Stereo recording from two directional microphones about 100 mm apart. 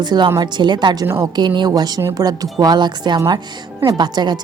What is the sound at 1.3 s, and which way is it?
A woman's voice, 50° right (ahead or behind).